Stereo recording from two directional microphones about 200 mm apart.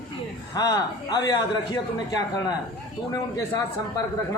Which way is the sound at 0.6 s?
20° left (ahead or behind).